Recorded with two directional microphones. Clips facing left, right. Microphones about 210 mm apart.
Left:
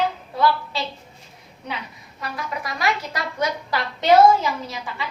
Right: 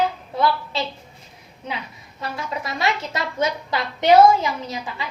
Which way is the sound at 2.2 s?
25° right (ahead or behind).